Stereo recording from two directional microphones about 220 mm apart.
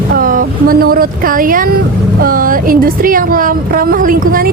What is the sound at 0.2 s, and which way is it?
Speech, 40° right (ahead or behind).